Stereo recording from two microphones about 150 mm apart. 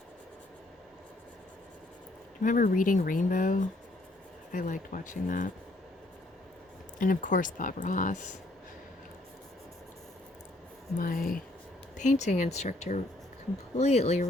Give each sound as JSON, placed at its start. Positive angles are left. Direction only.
{"t": 2.4, "sound": "speech", "side_deg": 65}
{"t": 7.0, "sound": "speech", "side_deg": 60}
{"t": 10.9, "sound": "speech", "side_deg": 75}
{"t": 11.9, "sound": "speech", "side_deg": 50}